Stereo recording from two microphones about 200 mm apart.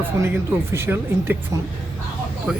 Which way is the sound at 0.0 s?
10° right (ahead or behind).